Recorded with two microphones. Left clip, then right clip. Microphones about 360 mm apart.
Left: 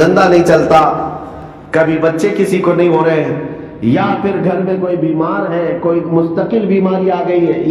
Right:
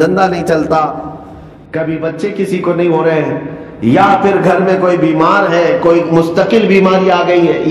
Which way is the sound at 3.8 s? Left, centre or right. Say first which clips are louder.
Right 6 dB; centre.